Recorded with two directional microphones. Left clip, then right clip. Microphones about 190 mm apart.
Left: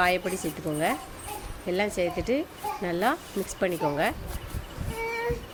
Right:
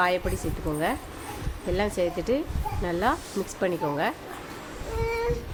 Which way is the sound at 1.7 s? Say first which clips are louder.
Right 1 dB; 10° left (ahead or behind).